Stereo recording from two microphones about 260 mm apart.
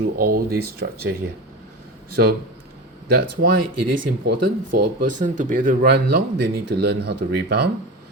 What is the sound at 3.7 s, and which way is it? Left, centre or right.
Speech, right.